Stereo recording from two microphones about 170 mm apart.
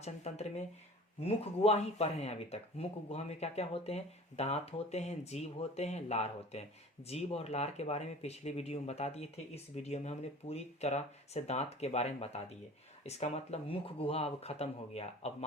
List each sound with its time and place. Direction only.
0.0 s speech: 40° left (ahead or behind)